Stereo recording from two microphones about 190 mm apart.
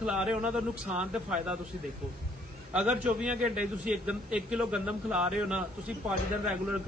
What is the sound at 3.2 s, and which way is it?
Speech, 40° right (ahead or behind).